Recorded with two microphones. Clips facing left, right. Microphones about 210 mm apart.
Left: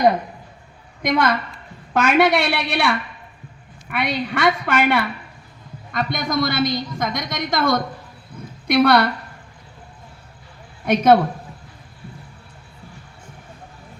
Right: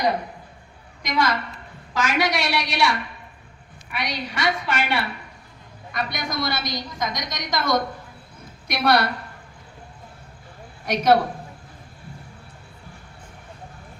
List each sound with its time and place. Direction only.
1.0 s a woman's voice: 55° left (ahead or behind)
10.8 s a woman's voice: 50° left (ahead or behind)